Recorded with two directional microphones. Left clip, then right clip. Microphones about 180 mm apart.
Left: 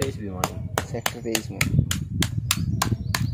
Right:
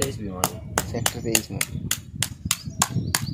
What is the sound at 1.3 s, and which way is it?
Speech, 5° right (ahead or behind).